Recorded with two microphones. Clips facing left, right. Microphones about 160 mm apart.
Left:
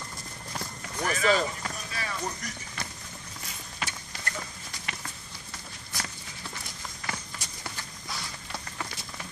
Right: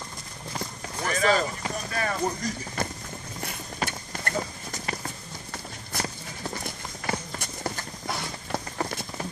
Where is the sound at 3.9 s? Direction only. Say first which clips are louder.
Right 5 dB; 50° right (ahead or behind).